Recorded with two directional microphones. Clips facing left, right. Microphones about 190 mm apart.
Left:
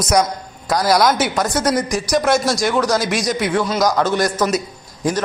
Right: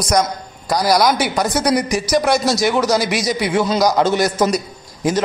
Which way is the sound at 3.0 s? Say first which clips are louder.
Even; 5° right (ahead or behind).